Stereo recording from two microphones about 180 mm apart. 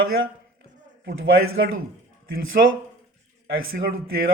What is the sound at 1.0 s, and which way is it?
Speech, 60° right (ahead or behind).